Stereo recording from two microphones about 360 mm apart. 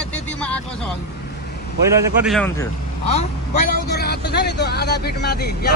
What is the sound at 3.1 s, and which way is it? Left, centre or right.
Speech, left.